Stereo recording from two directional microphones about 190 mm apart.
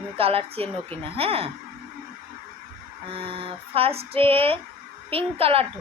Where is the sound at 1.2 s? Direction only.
30° right (ahead or behind).